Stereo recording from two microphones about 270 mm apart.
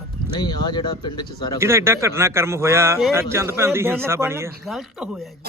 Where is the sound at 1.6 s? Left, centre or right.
Centre.